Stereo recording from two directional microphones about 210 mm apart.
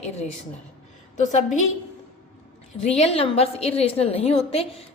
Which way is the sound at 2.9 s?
30° left (ahead or behind).